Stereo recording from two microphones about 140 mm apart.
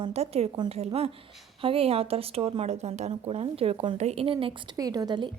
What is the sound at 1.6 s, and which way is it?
A woman's voice, 40° right (ahead or behind).